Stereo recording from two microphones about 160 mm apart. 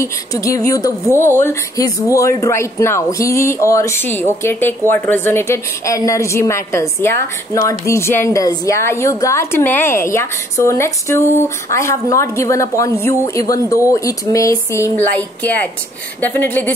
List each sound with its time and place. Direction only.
0.0 s speech: 20° left (ahead or behind)